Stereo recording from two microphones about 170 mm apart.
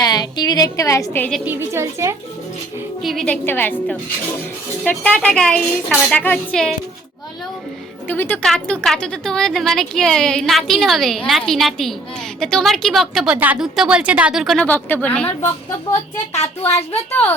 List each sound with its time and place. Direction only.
0.0 s a woman's voice: 25° left (ahead or behind)
1.5 s a woman's voice: 15° right (ahead or behind)
3.0 s speech: centre (ahead or behind)
3.4 s a woman's voice: 10° left (ahead or behind)
8.0 s speech: 10° left (ahead or behind)
14.7 s a woman's voice: 10° left (ahead or behind)
17.1 s a woman's voice: 10° left (ahead or behind)